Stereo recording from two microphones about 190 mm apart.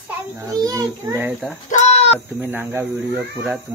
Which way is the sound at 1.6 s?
35° left (ahead or behind).